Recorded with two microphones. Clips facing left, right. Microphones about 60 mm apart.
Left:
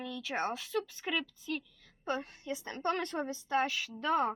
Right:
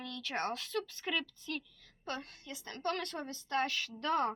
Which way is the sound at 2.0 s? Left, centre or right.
Centre.